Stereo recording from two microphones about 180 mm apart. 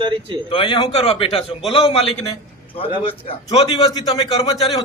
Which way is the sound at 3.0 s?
30° left (ahead or behind).